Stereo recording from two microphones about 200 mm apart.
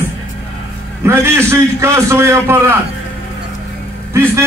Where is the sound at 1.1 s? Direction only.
15° right (ahead or behind).